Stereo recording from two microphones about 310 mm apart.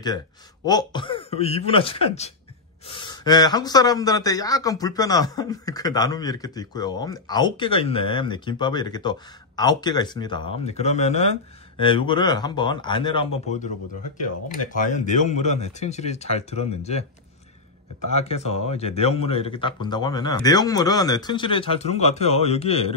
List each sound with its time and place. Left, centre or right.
0.7 s speech: centre
14.7 s speech: left
18.1 s speech: left